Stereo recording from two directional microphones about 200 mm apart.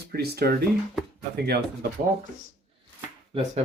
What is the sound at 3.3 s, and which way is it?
Speech, 30° right (ahead or behind).